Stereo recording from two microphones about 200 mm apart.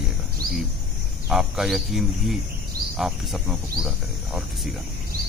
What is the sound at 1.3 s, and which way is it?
Speech, centre (ahead or behind).